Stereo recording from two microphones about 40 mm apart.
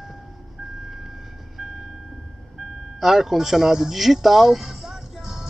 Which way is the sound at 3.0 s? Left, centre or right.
Centre.